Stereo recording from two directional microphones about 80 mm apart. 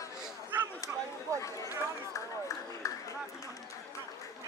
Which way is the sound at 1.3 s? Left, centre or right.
Left.